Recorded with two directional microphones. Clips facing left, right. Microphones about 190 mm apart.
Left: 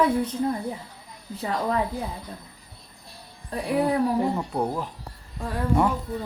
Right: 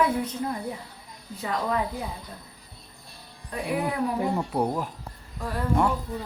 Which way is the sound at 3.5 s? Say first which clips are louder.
Left 2 dB; 35° left (ahead or behind).